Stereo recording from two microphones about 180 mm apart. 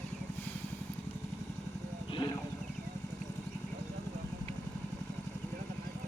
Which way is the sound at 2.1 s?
25° left (ahead or behind).